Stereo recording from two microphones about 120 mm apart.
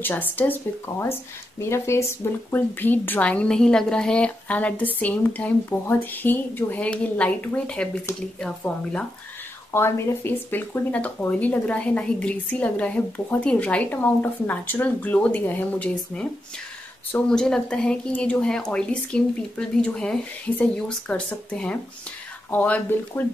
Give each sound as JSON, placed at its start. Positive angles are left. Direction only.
{"t": 0.0, "sound": "speech", "side_deg": 15}
{"t": 9.7, "sound": "speech", "side_deg": 20}
{"t": 17.3, "sound": "speech", "side_deg": 5}